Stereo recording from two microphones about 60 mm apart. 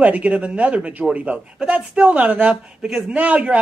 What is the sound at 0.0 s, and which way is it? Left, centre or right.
A man's voice, right.